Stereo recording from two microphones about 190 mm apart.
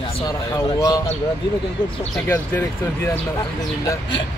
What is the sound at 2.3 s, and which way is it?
Speech, 15° left (ahead or behind).